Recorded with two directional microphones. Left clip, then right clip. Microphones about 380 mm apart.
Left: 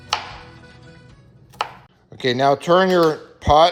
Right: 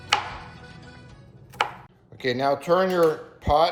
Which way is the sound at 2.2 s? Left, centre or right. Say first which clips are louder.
Left 6 dB; centre.